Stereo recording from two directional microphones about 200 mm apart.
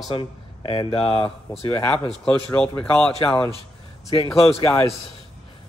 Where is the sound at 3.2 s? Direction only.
25° left (ahead or behind).